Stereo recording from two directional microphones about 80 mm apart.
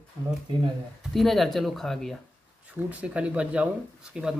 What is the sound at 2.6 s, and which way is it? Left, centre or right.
Speech, centre.